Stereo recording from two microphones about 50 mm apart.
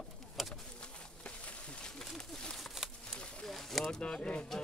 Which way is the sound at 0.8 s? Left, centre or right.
Left.